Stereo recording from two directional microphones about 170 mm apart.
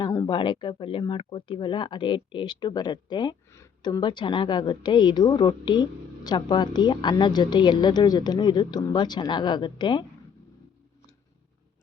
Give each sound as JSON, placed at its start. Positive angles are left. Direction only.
{"t": 0.0, "sound": "speech", "side_deg": 20}